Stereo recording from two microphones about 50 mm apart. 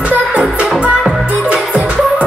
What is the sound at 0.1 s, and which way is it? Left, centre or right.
Music, right.